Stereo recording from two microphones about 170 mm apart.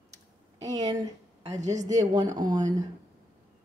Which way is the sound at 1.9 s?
20° right (ahead or behind).